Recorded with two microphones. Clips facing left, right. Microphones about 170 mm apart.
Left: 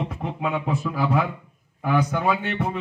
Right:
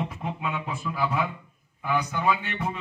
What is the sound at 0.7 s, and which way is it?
Speech, 40° left (ahead or behind).